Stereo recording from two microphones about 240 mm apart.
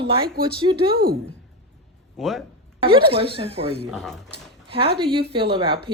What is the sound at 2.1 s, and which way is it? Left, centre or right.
Speech, centre.